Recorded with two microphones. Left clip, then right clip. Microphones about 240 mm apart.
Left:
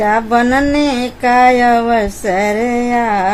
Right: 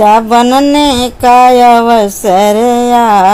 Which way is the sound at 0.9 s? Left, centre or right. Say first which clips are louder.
Right 7 dB; centre.